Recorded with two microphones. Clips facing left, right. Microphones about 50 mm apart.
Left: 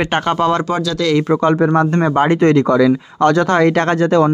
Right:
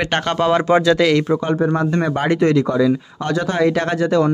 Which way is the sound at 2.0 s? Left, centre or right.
Left.